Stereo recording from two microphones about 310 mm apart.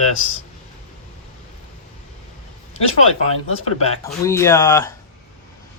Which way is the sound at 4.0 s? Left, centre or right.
Centre.